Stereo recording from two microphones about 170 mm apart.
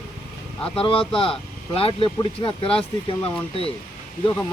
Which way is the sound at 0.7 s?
35° left (ahead or behind).